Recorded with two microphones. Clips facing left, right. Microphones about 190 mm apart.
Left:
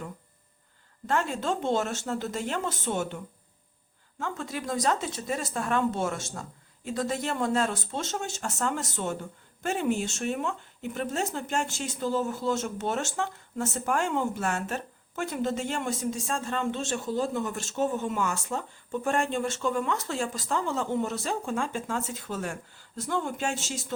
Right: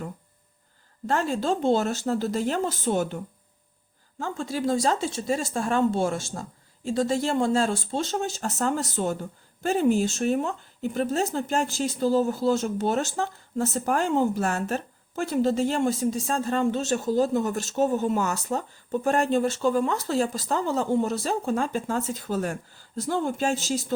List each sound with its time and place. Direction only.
1.0 s speech: 35° right (ahead or behind)
4.2 s speech: 30° right (ahead or behind)